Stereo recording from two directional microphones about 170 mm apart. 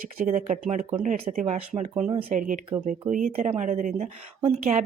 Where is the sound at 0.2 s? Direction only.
45° right (ahead or behind).